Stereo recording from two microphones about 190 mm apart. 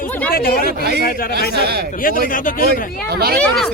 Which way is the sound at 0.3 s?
50° left (ahead or behind).